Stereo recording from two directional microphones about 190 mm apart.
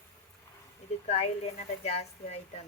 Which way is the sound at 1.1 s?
35° left (ahead or behind).